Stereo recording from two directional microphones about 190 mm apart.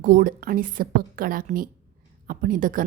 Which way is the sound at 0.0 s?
45° right (ahead or behind).